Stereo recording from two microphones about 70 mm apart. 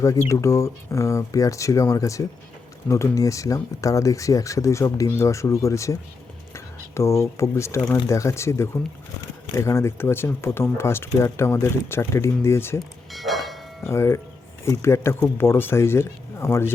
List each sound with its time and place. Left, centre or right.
0.0 s speech: left
13.1 s church bell: centre
13.8 s speech: left